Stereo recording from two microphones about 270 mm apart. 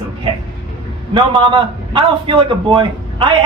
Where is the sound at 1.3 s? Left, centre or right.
Centre.